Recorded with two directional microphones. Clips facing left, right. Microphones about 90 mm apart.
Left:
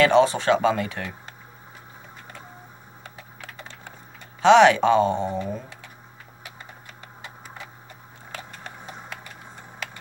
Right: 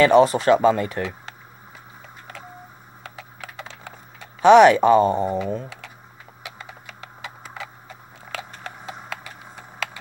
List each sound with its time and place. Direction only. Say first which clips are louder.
0.0 s speech: right 3 dB; 5° right (ahead or behind)
3.0 s computer keyboard: right 5 dB; 90° right
4.4 s speech: right 3 dB; 5° right (ahead or behind)
6.4 s typing: right 4 dB; 90° right